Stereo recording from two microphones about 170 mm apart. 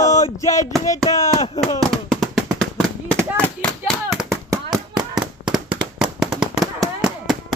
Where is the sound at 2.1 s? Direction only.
Centre (ahead or behind).